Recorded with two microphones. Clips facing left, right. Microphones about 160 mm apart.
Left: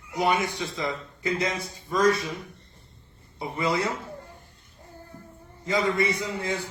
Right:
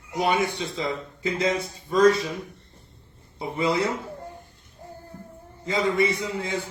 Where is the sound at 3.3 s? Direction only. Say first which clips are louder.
Right 2 dB; 25° right (ahead or behind).